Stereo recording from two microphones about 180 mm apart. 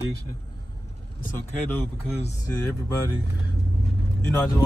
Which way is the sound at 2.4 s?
15° left (ahead or behind).